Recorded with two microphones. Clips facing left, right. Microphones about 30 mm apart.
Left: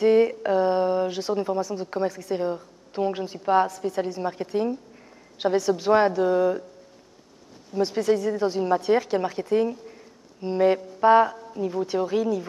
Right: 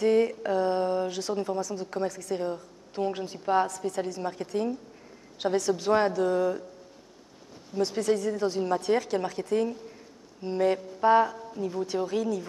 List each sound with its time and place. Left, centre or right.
0.0 s speech: centre
7.7 s speech: centre